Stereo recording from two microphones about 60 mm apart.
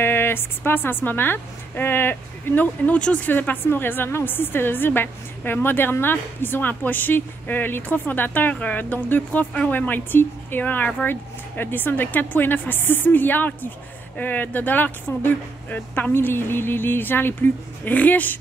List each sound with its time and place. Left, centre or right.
0.0 s a woman's voice: left
3.3 s a woman's voice: left
17.9 s speech: left